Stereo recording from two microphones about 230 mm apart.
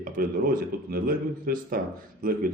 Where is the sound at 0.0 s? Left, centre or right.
Right.